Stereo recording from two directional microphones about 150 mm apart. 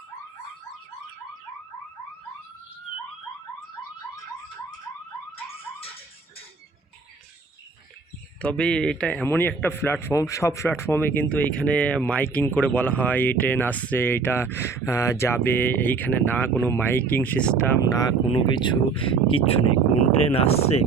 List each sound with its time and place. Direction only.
8.4 s a man's voice: 5° left (ahead or behind)
17.9 s speech: 25° left (ahead or behind); by 20.8 s 45° left (ahead or behind)